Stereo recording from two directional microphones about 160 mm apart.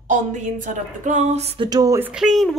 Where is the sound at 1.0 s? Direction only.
45° right (ahead or behind).